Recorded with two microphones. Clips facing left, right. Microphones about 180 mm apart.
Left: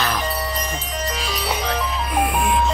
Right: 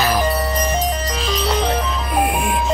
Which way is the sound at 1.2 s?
10° left (ahead or behind).